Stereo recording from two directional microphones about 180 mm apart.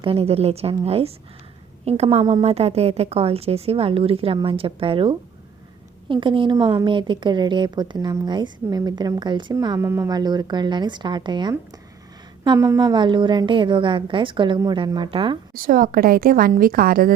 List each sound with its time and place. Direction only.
0.0 s a woman's voice: 30° right (ahead or behind)
15.5 s a woman's voice: 50° right (ahead or behind)